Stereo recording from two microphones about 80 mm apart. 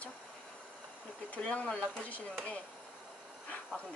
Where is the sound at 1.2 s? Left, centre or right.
Centre.